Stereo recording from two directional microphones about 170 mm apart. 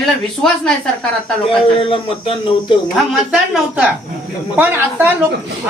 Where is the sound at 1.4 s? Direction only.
30° left (ahead or behind).